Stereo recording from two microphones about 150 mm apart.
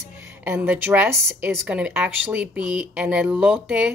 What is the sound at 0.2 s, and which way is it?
A woman's voice, 10° right (ahead or behind).